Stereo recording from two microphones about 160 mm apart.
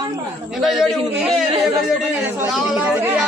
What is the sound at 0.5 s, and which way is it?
A man's voice, centre (ahead or behind).